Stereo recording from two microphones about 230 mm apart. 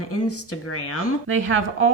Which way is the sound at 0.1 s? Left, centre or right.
Left.